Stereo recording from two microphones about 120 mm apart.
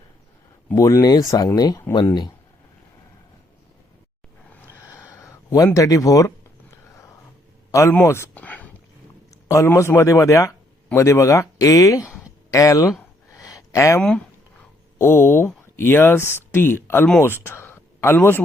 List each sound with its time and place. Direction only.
0.7 s speech: 25° left (ahead or behind)
4.8 s a sound: 25° left (ahead or behind)
7.7 s a man's voice: 25° left (ahead or behind)
9.3 s speech: 25° left (ahead or behind)
13.3 s a sound: 30° left (ahead or behind)
14.9 s speech: 20° left (ahead or behind)